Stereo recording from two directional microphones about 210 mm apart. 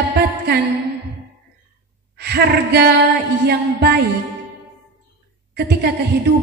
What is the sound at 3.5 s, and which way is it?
Speech, 50° right (ahead or behind).